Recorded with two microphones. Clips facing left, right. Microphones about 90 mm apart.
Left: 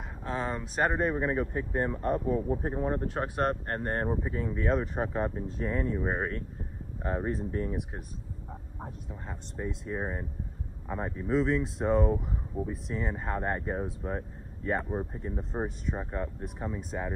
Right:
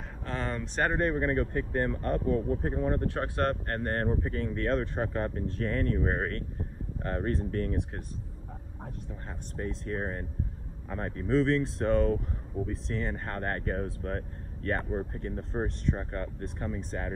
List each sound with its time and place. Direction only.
0.2 s speech: 15° left (ahead or behind)
9.6 s speech: 10° left (ahead or behind)